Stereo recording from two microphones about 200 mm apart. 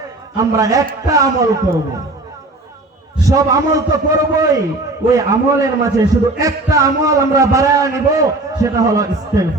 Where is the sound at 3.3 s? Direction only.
15° right (ahead or behind).